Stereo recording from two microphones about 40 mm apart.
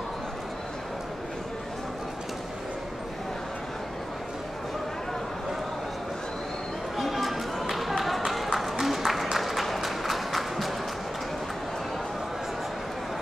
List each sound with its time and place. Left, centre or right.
7.0 s run: centre